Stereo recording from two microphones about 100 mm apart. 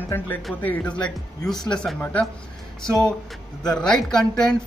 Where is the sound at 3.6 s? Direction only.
5° left (ahead or behind).